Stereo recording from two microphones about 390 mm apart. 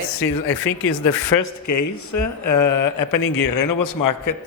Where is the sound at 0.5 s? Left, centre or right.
Left.